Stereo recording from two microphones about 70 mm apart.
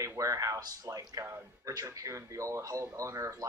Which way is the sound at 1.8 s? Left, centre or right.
Right.